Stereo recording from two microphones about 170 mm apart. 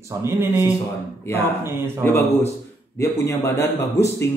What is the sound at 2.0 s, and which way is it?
A man's voice, 15° left (ahead or behind).